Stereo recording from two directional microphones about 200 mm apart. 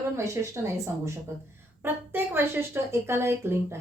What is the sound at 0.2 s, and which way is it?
Speech, 15° right (ahead or behind).